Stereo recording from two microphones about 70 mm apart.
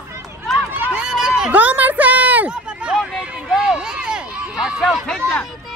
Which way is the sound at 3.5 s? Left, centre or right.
Centre.